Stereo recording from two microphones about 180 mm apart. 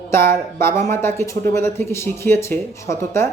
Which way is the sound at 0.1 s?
15° left (ahead or behind).